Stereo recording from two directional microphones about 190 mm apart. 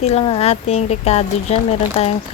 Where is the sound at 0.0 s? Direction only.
35° left (ahead or behind).